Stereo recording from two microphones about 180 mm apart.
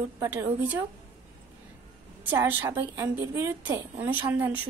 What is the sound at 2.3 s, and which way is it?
A woman's voice, 10° right (ahead or behind).